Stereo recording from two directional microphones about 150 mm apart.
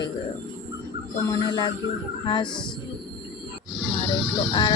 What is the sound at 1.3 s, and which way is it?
Speech, 30° left (ahead or behind).